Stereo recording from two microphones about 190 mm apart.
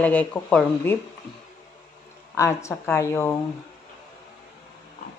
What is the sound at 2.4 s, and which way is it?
Speech, 15° left (ahead or behind).